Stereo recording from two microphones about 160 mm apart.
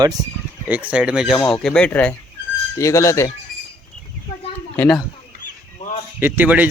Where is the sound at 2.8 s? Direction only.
20° left (ahead or behind).